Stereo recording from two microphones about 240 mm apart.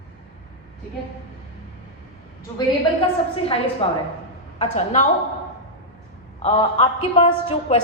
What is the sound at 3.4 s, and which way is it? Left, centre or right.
A woman's voice, left.